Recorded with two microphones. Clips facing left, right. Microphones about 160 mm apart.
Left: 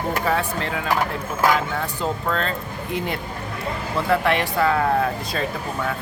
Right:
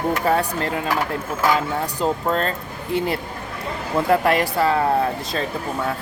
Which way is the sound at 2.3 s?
40° right (ahead or behind).